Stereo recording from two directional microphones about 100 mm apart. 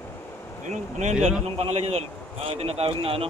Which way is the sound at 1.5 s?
90° right.